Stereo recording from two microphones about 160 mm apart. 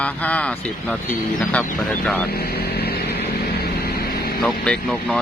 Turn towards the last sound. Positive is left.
turn(degrees=5)  # may be behind; listen again after turning